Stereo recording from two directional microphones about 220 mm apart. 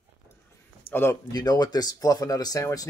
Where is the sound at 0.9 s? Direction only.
10° left (ahead or behind).